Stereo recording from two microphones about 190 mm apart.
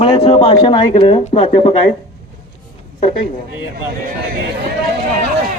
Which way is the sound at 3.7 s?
50° right (ahead or behind).